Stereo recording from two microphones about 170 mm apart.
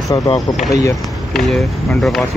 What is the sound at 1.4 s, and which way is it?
Speech, centre (ahead or behind).